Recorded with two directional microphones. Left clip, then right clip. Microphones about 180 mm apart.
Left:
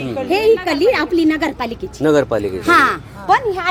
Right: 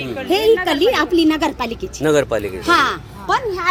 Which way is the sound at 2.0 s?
15° left (ahead or behind).